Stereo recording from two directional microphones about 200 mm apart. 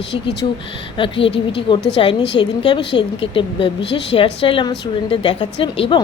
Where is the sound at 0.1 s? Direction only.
60° left (ahead or behind).